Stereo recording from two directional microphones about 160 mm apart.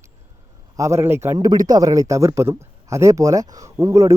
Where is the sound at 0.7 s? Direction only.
20° right (ahead or behind).